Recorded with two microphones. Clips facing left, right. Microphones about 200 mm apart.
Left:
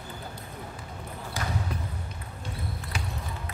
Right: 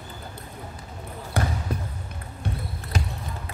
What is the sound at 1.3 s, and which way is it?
Basketball bounce, 60° right (ahead or behind).